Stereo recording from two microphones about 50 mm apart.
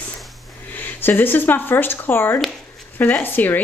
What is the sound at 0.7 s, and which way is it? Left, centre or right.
A woman's voice, left.